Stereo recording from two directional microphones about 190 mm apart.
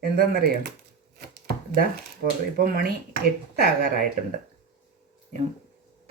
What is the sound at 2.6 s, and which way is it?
Speech, 50° right (ahead or behind).